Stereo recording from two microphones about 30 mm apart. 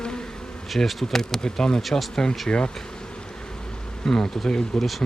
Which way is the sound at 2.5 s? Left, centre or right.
Left.